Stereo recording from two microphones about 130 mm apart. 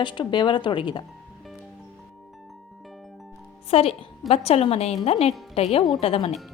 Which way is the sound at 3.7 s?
50° left (ahead or behind).